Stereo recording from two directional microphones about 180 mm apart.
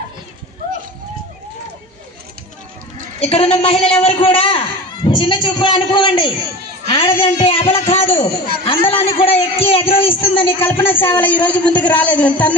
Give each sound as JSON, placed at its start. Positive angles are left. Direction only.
{"t": 3.2, "sound": "a man's voice", "side_deg": 35}
{"t": 10.6, "sound": "a man's voice", "side_deg": 10}